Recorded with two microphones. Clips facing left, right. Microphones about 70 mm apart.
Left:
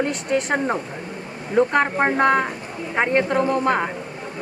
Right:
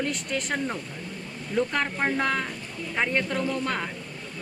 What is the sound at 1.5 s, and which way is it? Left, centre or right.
Speech, left.